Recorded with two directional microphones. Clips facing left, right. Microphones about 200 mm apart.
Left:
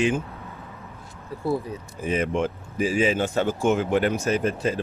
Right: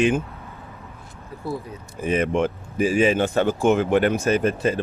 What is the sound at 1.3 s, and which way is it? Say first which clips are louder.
Speech: left 4 dB; 30° left (ahead or behind).